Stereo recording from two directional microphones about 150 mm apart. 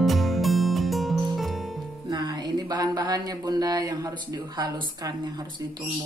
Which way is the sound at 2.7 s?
25° right (ahead or behind).